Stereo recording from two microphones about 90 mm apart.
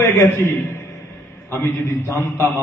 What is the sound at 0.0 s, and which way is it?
A man's voice, 25° left (ahead or behind).